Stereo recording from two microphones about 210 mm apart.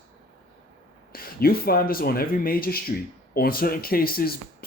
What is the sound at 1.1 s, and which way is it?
Speech, 45° left (ahead or behind).